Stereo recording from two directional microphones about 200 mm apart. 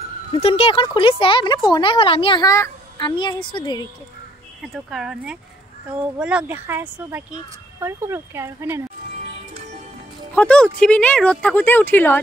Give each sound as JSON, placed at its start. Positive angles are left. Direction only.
{"t": 0.3, "sound": "speech", "side_deg": 30}
{"t": 4.7, "sound": "speech", "side_deg": 0}
{"t": 10.3, "sound": "speech", "side_deg": 5}